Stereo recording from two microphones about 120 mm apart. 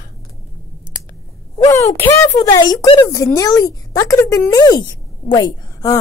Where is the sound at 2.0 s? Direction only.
25° left (ahead or behind).